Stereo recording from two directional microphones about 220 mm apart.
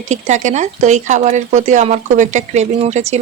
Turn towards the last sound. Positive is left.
turn(degrees=-30)  # may be behind; listen again after turning